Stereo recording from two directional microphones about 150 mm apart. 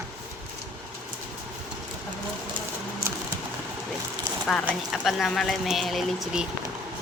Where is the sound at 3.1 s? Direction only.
15° right (ahead or behind).